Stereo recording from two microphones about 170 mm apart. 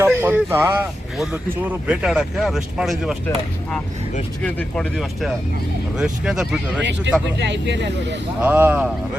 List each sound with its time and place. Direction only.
0.0 s speech: 10° right (ahead or behind)
4.4 s speech: 5° left (ahead or behind)
7.4 s speech: 90° right
8.4 s speech: 10° right (ahead or behind)